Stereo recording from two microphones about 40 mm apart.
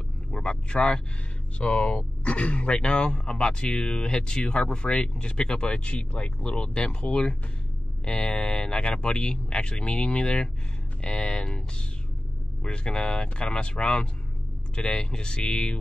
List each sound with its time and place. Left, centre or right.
0.3 s vehicle: left
1.6 s speech: left
12.6 s speech: left